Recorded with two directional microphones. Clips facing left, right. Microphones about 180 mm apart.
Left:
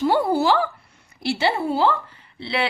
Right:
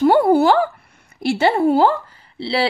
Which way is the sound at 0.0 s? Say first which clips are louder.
Right 6 dB; 55° right (ahead or behind).